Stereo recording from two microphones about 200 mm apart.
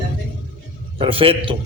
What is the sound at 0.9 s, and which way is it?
Speech, 25° right (ahead or behind).